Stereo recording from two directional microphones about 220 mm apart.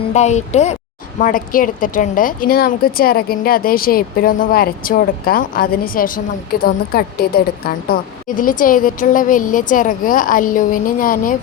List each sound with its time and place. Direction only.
0.1 s speech: 30° left (ahead or behind)